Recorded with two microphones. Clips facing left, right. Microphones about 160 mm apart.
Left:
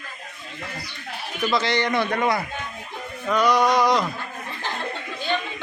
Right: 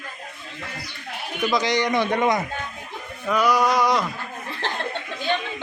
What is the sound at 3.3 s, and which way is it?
Speech, 5° right (ahead or behind).